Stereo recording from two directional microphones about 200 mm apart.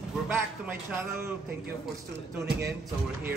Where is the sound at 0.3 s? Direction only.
10° right (ahead or behind).